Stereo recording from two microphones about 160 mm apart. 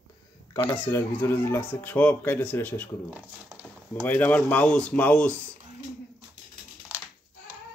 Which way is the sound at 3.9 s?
10° left (ahead or behind).